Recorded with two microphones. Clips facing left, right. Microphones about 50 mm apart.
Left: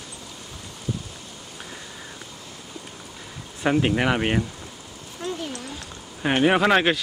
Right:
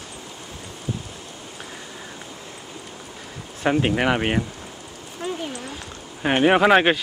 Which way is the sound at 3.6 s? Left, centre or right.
Centre.